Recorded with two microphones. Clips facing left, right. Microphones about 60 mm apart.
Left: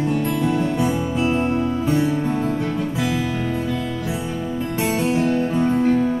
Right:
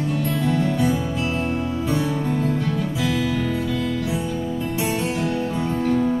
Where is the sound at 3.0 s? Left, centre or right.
Left.